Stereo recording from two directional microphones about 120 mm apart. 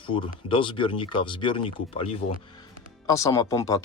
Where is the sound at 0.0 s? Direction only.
45° left (ahead or behind).